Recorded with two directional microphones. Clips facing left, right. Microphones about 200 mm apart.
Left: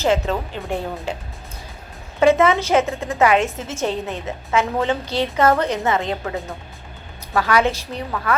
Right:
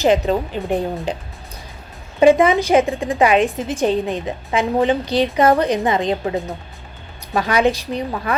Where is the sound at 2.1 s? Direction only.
15° right (ahead or behind).